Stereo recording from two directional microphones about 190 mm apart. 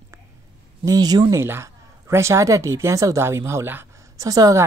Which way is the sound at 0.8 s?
20° right (ahead or behind).